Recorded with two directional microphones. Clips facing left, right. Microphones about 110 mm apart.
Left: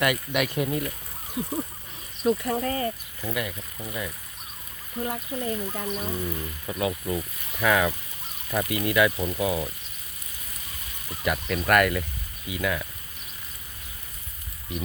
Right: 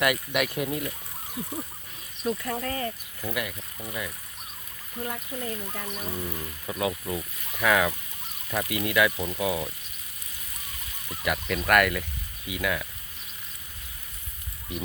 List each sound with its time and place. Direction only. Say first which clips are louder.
0.0 s frying: left 1 dB; 5° right (ahead or behind)
2.2 s speech: left 5 dB; 25° left (ahead or behind)
2.6 s speech: left 2 dB; 5° left (ahead or behind)
3.2 s speech: even; 10° right (ahead or behind)
3.8 s frying: left 1 dB; 5° left (ahead or behind)
4.9 s speech: left 4 dB; 25° left (ahead or behind)
6.1 s frying: left 3 dB; 5° right (ahead or behind)
11.2 s frying: left 1 dB; centre (ahead or behind)